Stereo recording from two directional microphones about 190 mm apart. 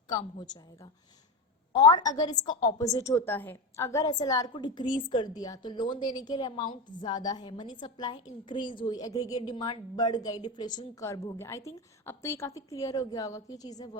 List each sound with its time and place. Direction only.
0.1 s a woman's voice: 20° left (ahead or behind)